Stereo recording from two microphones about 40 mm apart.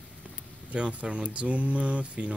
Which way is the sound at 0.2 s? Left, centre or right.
Right.